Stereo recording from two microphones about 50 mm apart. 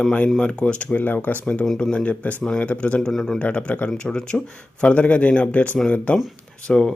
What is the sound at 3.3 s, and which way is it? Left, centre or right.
Speech, left.